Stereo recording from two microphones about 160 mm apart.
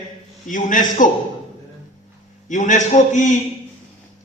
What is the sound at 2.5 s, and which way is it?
Speech, 50° left (ahead or behind).